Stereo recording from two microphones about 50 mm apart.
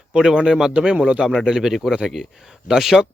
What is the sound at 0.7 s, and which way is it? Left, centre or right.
Speech, right.